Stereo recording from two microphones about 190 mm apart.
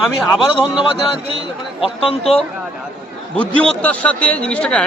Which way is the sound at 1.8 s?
30° left (ahead or behind).